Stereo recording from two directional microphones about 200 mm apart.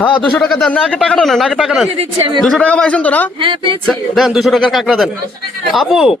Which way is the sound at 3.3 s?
25° right (ahead or behind).